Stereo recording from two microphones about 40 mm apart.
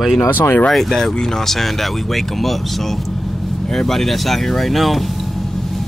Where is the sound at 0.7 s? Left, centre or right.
Centre.